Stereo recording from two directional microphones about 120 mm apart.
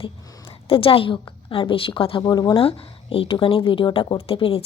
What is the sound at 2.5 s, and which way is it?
Speech, 50° left (ahead or behind).